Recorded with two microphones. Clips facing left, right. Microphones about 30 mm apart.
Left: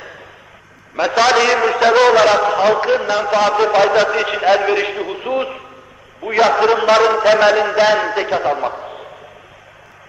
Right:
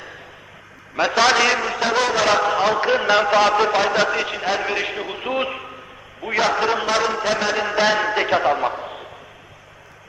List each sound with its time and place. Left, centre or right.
0.9 s a man's voice: centre
1.5 s a man's voice: centre
3.0 s a man's voice: centre
3.3 s a man's voice: centre
4.3 s a man's voice: centre
6.2 s a man's voice: centre
6.8 s a man's voice: centre
7.5 s a man's voice: centre